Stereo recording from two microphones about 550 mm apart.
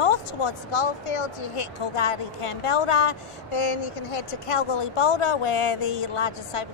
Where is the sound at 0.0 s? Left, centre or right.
Left.